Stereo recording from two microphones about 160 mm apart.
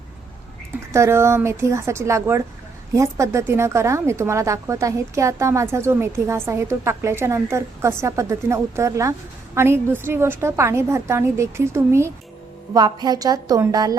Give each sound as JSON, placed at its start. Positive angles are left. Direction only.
{"t": 0.9, "sound": "a woman's voice", "side_deg": -15}